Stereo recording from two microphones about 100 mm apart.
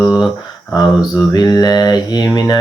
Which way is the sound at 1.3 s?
40° left (ahead or behind).